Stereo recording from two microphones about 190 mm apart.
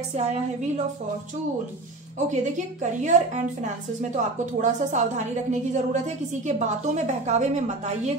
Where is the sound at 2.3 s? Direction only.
40° right (ahead or behind).